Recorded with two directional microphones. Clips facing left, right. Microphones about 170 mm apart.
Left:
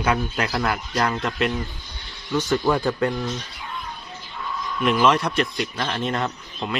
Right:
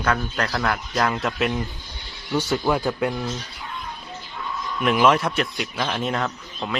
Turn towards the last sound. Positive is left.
turn(degrees=0)  # may be behind; listen again after turning